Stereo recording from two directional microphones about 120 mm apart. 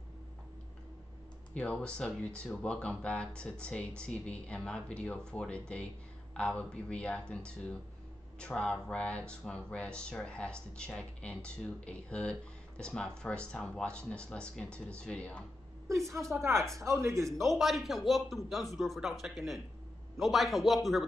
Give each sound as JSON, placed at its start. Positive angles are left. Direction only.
{"t": 1.5, "sound": "speech", "side_deg": 10}
{"t": 16.1, "sound": "a woman's voice", "side_deg": -25}
{"t": 17.5, "sound": "speech", "side_deg": 0}